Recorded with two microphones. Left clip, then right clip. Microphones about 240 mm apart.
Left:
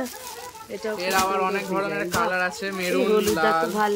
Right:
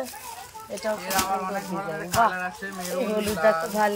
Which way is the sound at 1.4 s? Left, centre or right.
Left.